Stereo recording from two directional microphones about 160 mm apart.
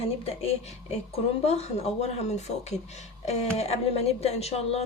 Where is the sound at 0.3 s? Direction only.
40° left (ahead or behind).